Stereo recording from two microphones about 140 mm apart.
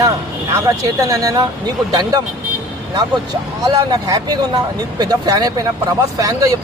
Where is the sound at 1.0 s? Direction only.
25° right (ahead or behind).